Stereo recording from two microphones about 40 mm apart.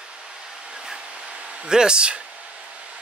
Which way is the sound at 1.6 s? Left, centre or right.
Centre.